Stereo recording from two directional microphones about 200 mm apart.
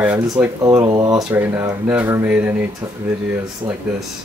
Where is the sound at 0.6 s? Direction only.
20° right (ahead or behind).